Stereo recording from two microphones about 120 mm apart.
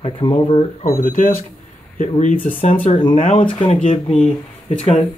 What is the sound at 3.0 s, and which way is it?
Speech, 50° left (ahead or behind).